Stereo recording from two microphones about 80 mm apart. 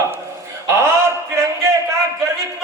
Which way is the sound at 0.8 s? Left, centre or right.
Right.